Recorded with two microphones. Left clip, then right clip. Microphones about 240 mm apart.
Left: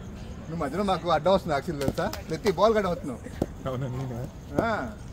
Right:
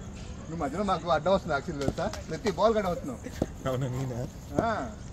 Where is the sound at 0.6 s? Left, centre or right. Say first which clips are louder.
Left 2 dB; left.